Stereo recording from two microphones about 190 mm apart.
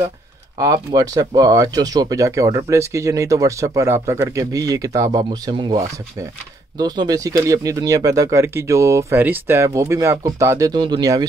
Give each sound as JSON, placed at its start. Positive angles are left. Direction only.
{"t": 0.6, "sound": "speech", "side_deg": -20}